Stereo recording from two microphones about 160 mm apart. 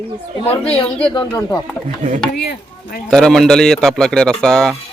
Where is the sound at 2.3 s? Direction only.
80° left.